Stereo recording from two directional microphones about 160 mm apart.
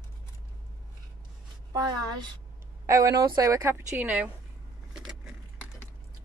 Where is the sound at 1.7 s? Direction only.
25° right (ahead or behind).